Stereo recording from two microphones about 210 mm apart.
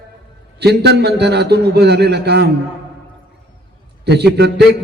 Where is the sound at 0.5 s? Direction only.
50° right (ahead or behind).